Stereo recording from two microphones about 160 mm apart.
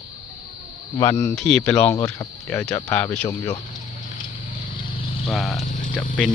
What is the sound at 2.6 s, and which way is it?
Speech, 5° left (ahead or behind).